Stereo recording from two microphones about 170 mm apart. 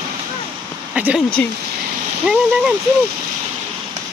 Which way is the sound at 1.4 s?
5° left (ahead or behind).